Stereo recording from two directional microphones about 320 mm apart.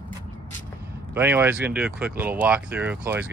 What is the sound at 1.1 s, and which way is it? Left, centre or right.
Speech, centre.